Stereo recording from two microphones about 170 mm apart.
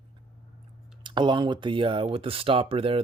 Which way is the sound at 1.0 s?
30° right (ahead or behind).